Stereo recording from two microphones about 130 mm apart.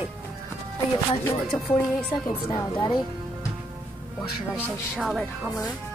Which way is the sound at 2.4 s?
30° left (ahead or behind).